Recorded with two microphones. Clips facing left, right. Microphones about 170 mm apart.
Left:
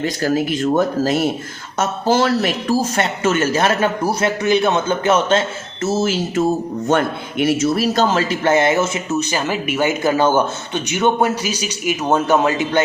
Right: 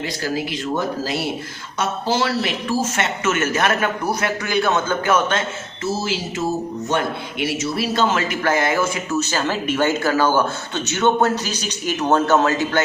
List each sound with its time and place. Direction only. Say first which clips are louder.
0.0 s a man's voice: left 6 dB; 50° left (ahead or behind); by 5.4 s 25° left (ahead or behind)
5.8 s a man's voice: left 5 dB; 50° left (ahead or behind); by 12.8 s 15° left (ahead or behind)